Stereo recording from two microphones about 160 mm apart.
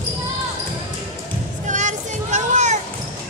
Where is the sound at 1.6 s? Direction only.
50° right (ahead or behind).